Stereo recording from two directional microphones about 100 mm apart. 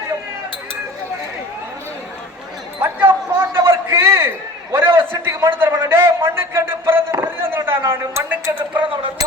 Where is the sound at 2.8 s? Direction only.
20° right (ahead or behind).